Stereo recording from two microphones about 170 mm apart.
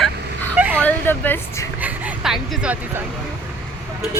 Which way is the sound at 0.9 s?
10° left (ahead or behind).